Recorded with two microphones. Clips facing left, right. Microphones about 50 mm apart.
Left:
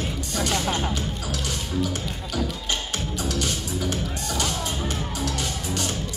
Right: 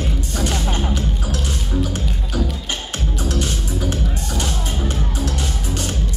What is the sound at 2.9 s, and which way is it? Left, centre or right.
Music, right.